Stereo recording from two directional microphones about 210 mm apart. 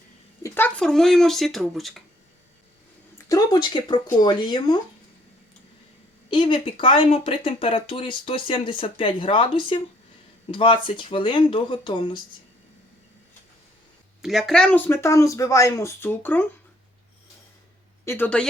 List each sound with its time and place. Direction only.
0.4 s speech: 10° left (ahead or behind)
3.2 s speech: 20° left (ahead or behind)
6.3 s speech: 25° left (ahead or behind)
14.2 s speech: centre (ahead or behind)
18.0 s speech: 10° left (ahead or behind)